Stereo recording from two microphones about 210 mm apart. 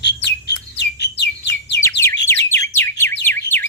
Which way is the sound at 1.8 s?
10° left (ahead or behind).